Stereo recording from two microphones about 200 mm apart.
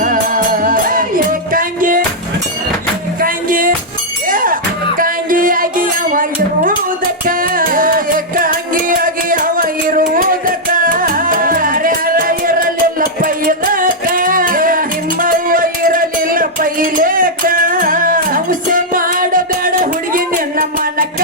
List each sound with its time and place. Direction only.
0.0 s music: 40° right (ahead or behind)
3.2 s music: 45° right (ahead or behind)